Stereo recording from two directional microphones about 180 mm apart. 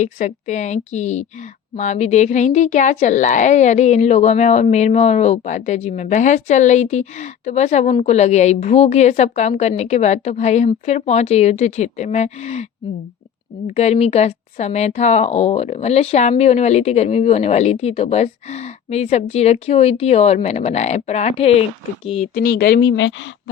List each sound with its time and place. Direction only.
0.0 s speech: 40° left (ahead or behind)
13.7 s speech: 40° left (ahead or behind)
22.4 s a woman's voice: 60° left (ahead or behind); by 23.3 s 90° left